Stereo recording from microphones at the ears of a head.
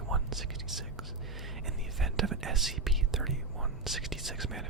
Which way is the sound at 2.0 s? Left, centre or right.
Right.